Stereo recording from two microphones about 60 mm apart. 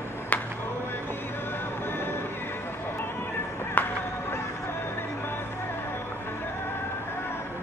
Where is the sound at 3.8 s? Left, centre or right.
Left.